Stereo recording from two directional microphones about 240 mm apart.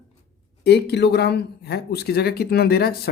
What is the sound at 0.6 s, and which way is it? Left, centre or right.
Speech, left.